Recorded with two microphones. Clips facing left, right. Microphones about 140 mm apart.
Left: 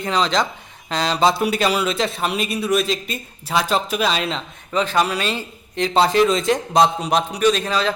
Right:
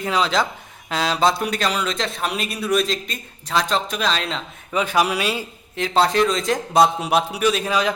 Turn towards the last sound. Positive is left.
turn(degrees=-10)  # may be behind; listen again after turning